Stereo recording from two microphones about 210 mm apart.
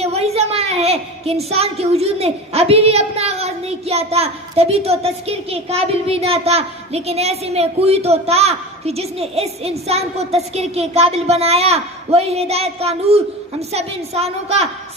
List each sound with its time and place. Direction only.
0.0 s a woman's voice: 30° right (ahead or behind)